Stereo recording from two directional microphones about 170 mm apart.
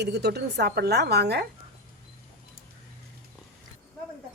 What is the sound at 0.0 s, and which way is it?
A woman's voice, 80° right.